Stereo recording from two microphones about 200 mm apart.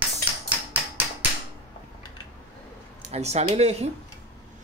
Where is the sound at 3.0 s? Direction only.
35° right (ahead or behind).